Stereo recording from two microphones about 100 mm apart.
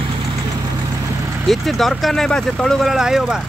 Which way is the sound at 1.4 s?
Centre (ahead or behind).